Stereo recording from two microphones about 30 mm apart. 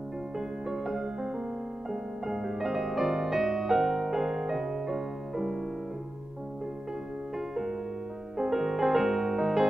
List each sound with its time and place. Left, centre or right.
0.4 s music: centre
2.3 s music: centre
7.3 s music: centre